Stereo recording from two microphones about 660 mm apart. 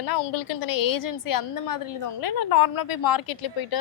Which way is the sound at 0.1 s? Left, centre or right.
Left.